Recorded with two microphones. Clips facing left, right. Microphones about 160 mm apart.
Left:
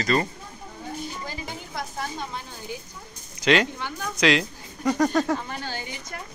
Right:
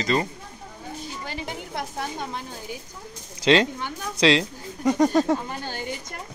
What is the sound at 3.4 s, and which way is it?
Speech, 25° right (ahead or behind).